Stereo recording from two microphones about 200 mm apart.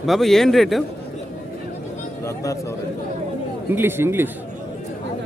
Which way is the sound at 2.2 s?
15° left (ahead or behind).